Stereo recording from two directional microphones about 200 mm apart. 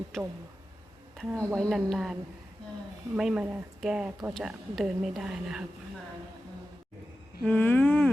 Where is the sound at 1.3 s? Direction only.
15° right (ahead or behind).